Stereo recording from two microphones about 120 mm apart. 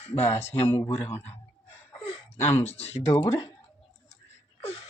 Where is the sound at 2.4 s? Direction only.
20° left (ahead or behind).